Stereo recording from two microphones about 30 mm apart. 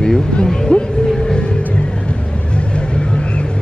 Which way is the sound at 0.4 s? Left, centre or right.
Left.